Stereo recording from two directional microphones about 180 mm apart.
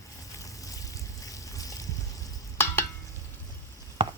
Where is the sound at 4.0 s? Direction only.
25° right (ahead or behind).